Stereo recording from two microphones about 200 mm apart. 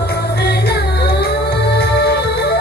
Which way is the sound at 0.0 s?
55° left (ahead or behind).